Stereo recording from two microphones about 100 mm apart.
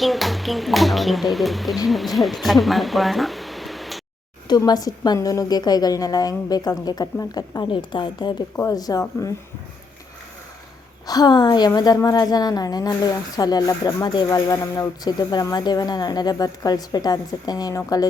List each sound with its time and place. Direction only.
0.0 s speech: centre (ahead or behind)
4.4 s a woman's voice: 45° left (ahead or behind)
8.5 s a woman's voice: 35° left (ahead or behind)
11.0 s a woman's voice: 40° left (ahead or behind)